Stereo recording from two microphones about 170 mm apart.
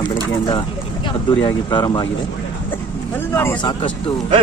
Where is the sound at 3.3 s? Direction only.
15° left (ahead or behind).